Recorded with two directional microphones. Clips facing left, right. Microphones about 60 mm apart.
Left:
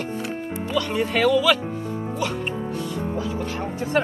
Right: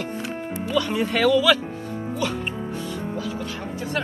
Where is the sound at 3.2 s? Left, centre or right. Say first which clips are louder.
Left 3 dB; left.